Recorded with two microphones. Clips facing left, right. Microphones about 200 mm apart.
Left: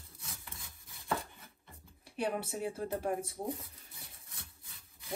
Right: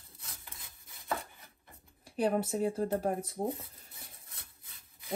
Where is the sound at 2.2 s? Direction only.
50° right (ahead or behind).